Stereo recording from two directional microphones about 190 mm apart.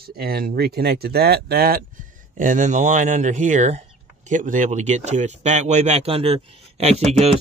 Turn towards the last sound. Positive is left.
turn(degrees=-35)  # may be behind; listen again after turning